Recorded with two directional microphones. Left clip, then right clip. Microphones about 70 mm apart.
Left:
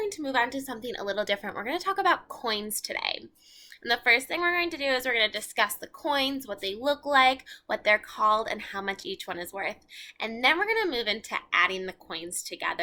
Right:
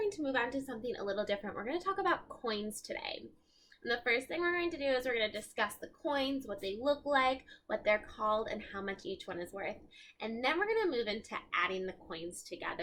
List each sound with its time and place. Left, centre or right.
0.0 s a woman's voice: centre